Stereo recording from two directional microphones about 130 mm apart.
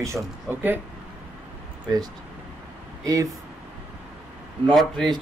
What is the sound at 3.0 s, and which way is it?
Speech, 25° right (ahead or behind).